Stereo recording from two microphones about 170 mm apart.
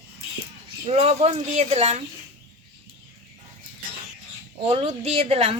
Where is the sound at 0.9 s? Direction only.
35° right (ahead or behind).